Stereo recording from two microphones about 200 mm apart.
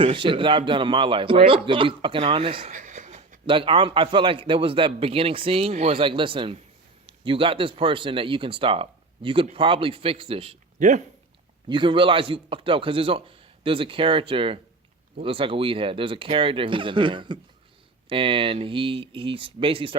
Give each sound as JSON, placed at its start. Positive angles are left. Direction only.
{"t": 0.0, "sound": "speech", "side_deg": -25}
{"t": 2.7, "sound": "a sound", "side_deg": -40}
{"t": 3.4, "sound": "speech", "side_deg": -25}
{"t": 11.7, "sound": "speech", "side_deg": -25}